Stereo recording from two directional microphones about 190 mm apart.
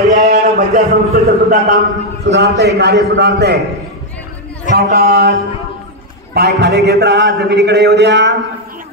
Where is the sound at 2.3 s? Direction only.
60° right (ahead or behind).